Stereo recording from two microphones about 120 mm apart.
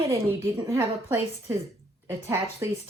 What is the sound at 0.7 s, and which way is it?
Speech, 20° right (ahead or behind).